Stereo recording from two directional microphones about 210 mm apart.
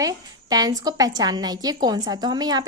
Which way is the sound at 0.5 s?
20° right (ahead or behind).